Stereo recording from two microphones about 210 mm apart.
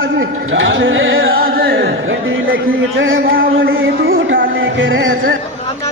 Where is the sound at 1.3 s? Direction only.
45° right (ahead or behind).